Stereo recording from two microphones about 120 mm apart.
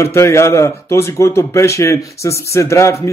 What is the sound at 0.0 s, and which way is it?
Speech, 25° left (ahead or behind).